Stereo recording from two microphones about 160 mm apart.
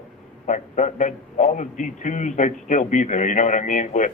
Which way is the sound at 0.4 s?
50° left (ahead or behind).